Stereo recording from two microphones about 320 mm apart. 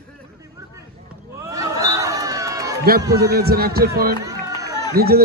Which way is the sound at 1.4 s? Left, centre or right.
Centre.